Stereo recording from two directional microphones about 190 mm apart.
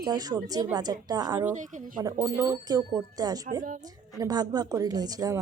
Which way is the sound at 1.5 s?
40° right (ahead or behind).